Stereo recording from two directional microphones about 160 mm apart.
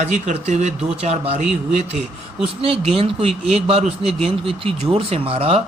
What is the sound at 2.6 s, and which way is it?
Speech, 35° right (ahead or behind).